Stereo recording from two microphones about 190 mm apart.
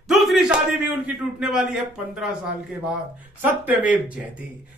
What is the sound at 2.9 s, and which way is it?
Speech, 10° right (ahead or behind).